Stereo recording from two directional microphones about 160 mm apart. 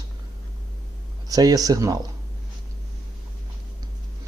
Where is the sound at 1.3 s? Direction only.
25° right (ahead or behind).